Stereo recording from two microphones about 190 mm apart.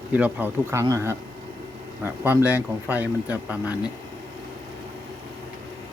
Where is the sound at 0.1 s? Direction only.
10° right (ahead or behind).